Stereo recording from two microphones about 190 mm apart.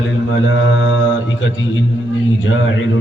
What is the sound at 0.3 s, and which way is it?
Mantra, 85° left.